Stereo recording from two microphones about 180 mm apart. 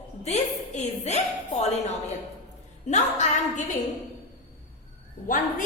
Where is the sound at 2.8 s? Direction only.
40° left (ahead or behind).